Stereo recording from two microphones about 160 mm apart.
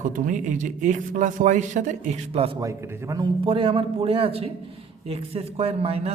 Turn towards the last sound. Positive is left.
turn(degrees=-35)  # may be behind; listen again after turning